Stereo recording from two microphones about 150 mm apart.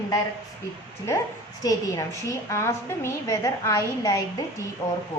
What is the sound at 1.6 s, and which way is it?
A woman's voice, 20° left (ahead or behind).